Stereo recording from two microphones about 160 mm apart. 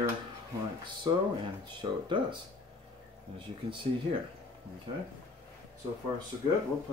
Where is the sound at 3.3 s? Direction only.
30° right (ahead or behind).